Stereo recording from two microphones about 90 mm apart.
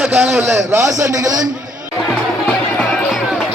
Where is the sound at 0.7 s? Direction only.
35° right (ahead or behind).